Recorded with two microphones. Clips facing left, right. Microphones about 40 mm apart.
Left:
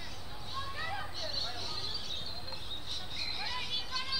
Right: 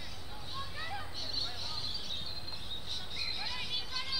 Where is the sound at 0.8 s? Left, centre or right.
Centre.